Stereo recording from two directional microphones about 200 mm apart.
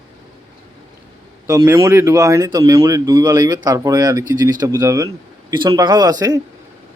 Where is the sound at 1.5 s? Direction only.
15° right (ahead or behind).